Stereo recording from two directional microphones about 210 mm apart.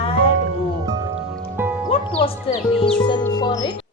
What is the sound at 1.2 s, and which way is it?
Music, 5° right (ahead or behind).